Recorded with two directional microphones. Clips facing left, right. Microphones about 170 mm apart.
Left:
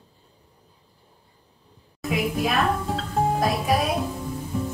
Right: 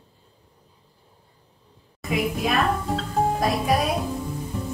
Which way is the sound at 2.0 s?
Centre (ahead or behind).